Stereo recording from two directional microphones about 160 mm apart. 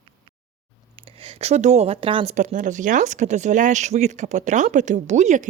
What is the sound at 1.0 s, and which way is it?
Speech, 35° right (ahead or behind).